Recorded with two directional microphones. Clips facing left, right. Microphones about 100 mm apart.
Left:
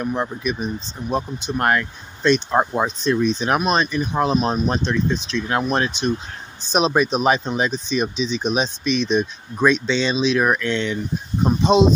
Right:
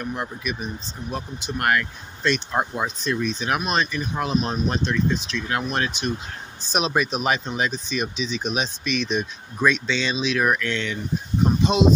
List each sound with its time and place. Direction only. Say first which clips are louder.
0.0 s speech: left 6 dB; 30° left (ahead or behind)
4.1 s speech: left 6 dB; 35° left (ahead or behind)